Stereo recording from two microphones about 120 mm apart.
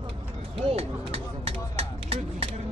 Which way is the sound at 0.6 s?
50° right (ahead or behind).